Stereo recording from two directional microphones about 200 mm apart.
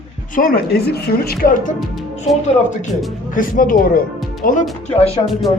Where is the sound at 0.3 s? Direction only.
45° left (ahead or behind).